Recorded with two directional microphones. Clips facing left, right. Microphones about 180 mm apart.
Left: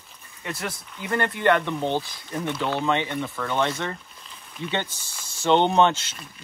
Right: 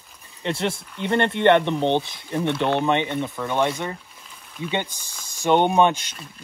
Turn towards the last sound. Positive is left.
turn(degrees=-15)  # may be behind; listen again after turning